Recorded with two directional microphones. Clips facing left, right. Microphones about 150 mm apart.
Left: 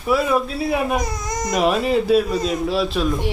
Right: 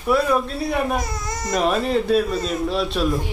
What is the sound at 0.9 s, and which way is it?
Speech, 15° left (ahead or behind).